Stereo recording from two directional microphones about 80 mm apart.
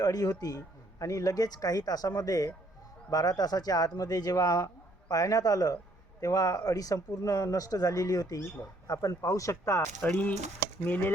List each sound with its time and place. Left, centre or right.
0.0 s speech: left
10.0 s speech: centre